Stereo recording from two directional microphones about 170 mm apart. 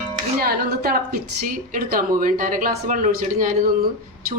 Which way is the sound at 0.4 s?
60° right (ahead or behind).